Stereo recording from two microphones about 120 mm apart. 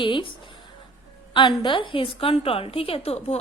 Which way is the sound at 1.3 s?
40° left (ahead or behind).